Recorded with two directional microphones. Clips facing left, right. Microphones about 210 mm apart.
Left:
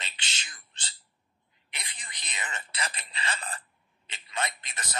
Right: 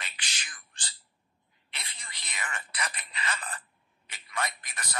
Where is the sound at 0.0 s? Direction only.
25° left (ahead or behind).